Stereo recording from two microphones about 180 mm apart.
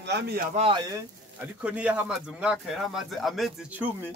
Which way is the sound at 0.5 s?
30° right (ahead or behind).